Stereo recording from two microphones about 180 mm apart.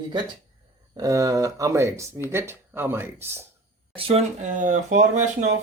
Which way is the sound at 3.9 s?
35° right (ahead or behind).